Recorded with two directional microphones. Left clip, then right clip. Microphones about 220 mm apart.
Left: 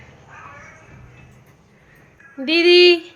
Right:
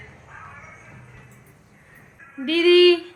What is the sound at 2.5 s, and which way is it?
Speech, 10° left (ahead or behind).